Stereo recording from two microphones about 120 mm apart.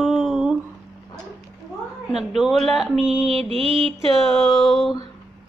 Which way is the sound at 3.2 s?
50° right (ahead or behind).